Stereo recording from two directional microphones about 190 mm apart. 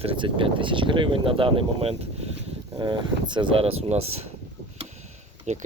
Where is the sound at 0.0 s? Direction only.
30° right (ahead or behind).